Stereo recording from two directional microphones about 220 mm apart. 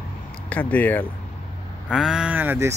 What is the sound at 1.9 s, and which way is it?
Speech, 5° right (ahead or behind).